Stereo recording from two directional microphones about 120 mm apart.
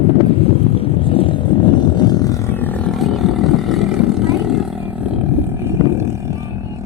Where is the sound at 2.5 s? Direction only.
15° left (ahead or behind).